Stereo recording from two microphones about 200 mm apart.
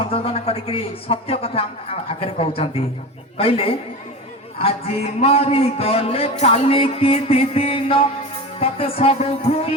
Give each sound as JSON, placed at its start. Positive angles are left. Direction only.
{"t": 0.1, "sound": "a man's voice", "side_deg": 30}